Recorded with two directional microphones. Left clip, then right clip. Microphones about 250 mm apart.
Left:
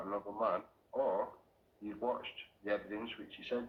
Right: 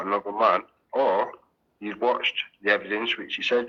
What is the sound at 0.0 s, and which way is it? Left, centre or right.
Speech, right.